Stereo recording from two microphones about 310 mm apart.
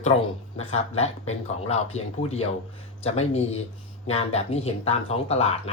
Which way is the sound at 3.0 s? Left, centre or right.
Centre.